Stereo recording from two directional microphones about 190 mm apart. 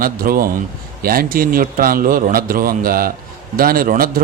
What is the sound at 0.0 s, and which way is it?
Speech, 50° right (ahead or behind).